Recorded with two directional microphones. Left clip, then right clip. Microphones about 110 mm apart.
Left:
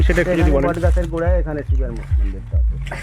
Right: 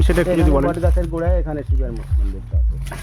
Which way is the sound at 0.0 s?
40° right (ahead or behind).